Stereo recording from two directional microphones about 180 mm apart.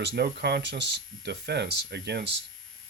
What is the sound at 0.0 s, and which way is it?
Speech, 65° right (ahead or behind).